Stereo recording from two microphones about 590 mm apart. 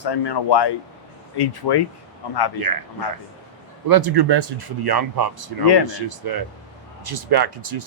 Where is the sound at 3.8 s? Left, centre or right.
Right.